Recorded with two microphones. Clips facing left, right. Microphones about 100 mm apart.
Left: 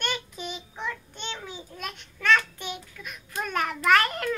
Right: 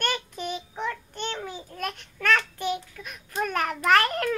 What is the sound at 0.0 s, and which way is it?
Child singing, 45° right (ahead or behind).